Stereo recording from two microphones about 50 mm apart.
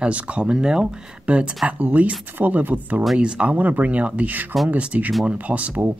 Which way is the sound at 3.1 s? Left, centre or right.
Centre.